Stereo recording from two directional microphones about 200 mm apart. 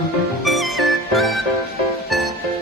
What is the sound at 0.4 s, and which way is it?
Music, centre (ahead or behind).